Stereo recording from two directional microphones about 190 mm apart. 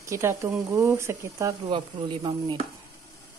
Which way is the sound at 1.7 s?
25° right (ahead or behind).